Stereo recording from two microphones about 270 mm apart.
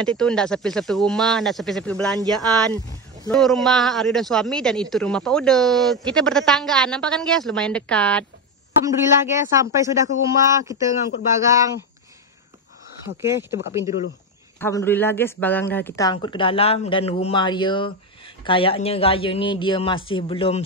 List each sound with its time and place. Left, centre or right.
0.0 s speech: centre
3.3 s speech: centre
8.8 s speech: centre
13.0 s speech: centre
14.6 s a man's voice: centre